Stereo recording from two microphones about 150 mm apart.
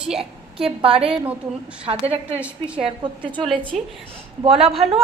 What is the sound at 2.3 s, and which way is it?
Speech, 10° right (ahead or behind).